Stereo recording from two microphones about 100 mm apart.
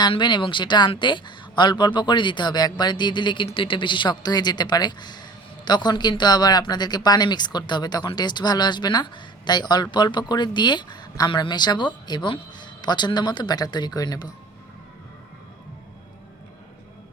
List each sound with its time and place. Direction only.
0.1 s speech: 50° left (ahead or behind)